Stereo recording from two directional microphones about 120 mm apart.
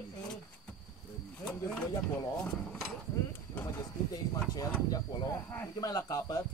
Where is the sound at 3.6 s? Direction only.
30° left (ahead or behind).